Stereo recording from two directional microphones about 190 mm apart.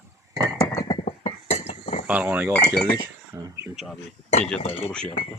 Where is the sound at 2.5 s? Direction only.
5° left (ahead or behind).